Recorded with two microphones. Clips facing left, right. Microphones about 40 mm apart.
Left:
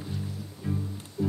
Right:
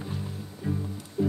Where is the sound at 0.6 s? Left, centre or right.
Centre.